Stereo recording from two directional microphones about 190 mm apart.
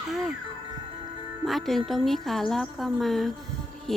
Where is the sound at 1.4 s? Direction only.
Centre (ahead or behind).